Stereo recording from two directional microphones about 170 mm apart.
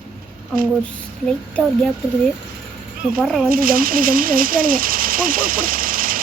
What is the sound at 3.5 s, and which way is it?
Speech, 55° right (ahead or behind).